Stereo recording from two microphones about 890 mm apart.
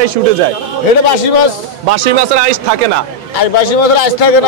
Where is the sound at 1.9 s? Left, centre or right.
Right.